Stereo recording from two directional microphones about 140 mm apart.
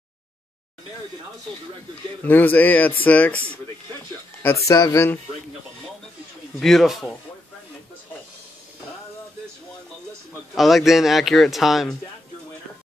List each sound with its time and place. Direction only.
2.2 s speech: 15° left (ahead or behind)
4.6 s speech: 25° left (ahead or behind)
6.6 s a man's voice: centre (ahead or behind)
10.5 s a man's voice: centre (ahead or behind)